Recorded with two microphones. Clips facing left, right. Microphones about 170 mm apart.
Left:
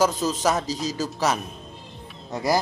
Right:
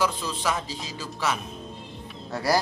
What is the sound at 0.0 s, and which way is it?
A man's voice, 40° left (ahead or behind).